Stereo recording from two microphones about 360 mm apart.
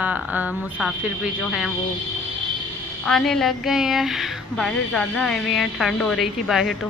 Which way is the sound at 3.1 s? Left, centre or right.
Centre.